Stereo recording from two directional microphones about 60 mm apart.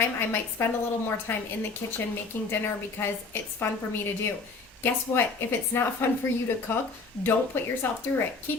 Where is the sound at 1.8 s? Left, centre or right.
Left.